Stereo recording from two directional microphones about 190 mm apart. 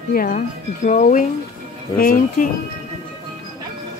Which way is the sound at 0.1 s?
45° left (ahead or behind).